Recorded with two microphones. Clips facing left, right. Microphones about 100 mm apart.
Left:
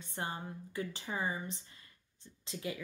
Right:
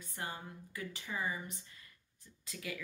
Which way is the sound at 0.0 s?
25° left (ahead or behind).